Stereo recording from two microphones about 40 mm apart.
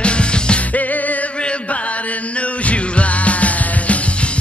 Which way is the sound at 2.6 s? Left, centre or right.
Left.